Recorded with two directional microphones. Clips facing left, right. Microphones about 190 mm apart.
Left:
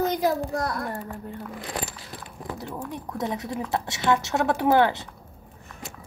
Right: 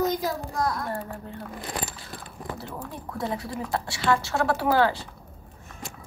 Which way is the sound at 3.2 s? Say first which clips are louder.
Left 1 dB; 20° left (ahead or behind).